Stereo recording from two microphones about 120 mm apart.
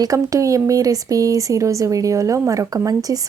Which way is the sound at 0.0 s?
30° right (ahead or behind).